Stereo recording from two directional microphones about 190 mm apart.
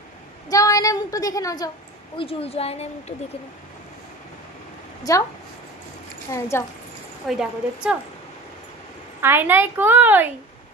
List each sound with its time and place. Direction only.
0.5 s a woman's voice: 15° left (ahead or behind)
2.1 s speech: 30° left (ahead or behind)
5.1 s a woman's voice: 20° left (ahead or behind)
6.3 s a woman's voice: 15° left (ahead or behind)
7.2 s a woman's voice: 5° right (ahead or behind)
9.2 s a woman's voice: 10° right (ahead or behind)